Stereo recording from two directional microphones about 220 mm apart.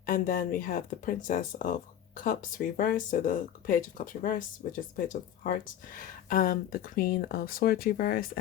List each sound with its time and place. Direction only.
0.0 s speech: 40° left (ahead or behind)